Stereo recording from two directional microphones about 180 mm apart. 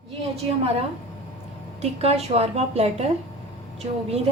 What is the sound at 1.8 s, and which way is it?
A woman's voice, 35° right (ahead or behind).